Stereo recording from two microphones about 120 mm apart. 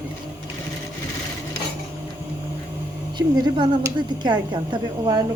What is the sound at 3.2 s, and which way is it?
A woman's voice, 40° right (ahead or behind).